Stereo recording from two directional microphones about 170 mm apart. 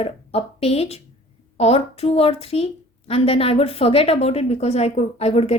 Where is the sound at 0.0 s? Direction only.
35° left (ahead or behind).